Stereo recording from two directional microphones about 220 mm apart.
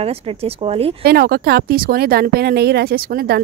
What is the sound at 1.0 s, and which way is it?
Speech, 45° right (ahead or behind).